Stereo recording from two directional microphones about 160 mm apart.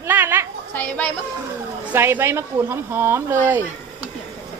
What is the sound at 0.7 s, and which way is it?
Speech, 10° left (ahead or behind).